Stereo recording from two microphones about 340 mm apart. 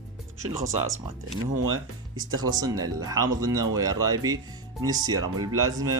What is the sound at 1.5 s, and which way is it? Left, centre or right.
Speech, right.